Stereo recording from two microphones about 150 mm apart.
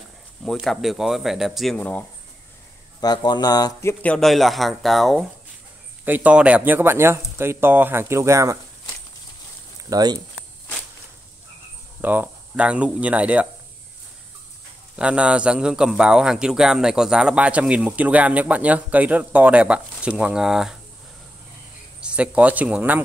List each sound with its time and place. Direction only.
0.4 s speech: centre (ahead or behind)
3.0 s speech: 30° left (ahead or behind)
4.0 s speech: 5° left (ahead or behind)
6.0 s a man's voice: 10° right (ahead or behind)
9.8 s speech: 25° right (ahead or behind)
12.0 s a man's voice: 10° right (ahead or behind)
15.0 s a man's voice: 10° right (ahead or behind)
22.0 s a man's voice: 10° right (ahead or behind)